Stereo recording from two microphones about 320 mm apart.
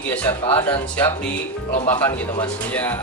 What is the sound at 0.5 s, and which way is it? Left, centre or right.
Speech, centre.